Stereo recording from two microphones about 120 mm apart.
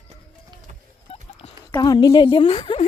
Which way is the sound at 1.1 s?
55° left (ahead or behind).